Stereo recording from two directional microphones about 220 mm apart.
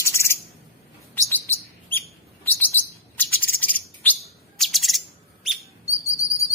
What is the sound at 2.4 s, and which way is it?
Chirp, 10° left (ahead or behind).